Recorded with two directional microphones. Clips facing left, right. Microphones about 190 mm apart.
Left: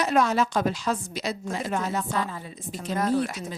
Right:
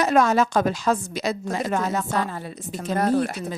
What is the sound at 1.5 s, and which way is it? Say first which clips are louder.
Speech: right 3 dB; 80° right.